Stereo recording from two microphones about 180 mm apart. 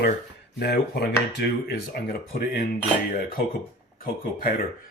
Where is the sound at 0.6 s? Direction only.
65° left (ahead or behind).